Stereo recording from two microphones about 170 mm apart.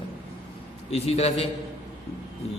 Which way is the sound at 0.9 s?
35° left (ahead or behind).